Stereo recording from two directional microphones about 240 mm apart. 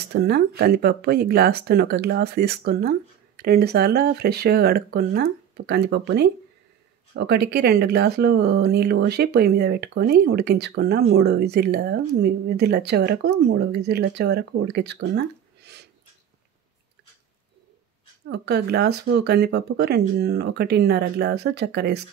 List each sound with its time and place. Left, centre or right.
0.1 s speech: right
18.3 s speech: right